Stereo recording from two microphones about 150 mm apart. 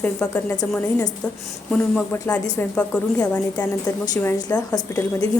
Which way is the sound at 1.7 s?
5° left (ahead or behind).